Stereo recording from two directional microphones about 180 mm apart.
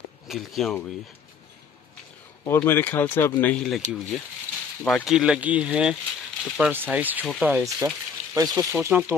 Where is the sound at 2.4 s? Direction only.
10° left (ahead or behind).